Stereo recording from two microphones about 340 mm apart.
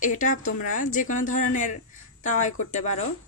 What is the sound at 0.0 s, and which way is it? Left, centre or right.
A woman's voice, left.